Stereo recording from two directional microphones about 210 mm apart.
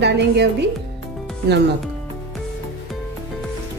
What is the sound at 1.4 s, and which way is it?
Speech, 55° right (ahead or behind).